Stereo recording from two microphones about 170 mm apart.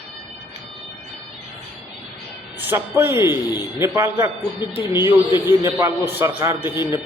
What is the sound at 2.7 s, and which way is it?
A man's voice, 10° right (ahead or behind).